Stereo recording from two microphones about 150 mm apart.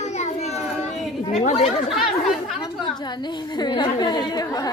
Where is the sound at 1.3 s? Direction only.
40° left (ahead or behind).